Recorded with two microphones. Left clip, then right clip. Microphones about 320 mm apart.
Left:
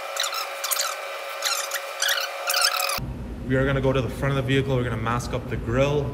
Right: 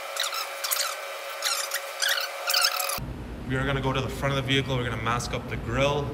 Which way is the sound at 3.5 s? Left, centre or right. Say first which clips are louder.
Left 5 dB; centre.